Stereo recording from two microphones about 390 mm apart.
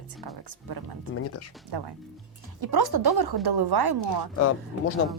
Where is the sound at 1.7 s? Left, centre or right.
Right.